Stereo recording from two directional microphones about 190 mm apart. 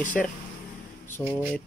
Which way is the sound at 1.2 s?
30° left (ahead or behind).